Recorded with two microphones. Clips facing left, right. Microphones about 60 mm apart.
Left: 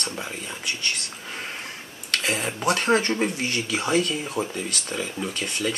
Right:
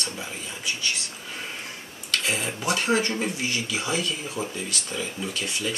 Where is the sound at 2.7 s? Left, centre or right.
Left.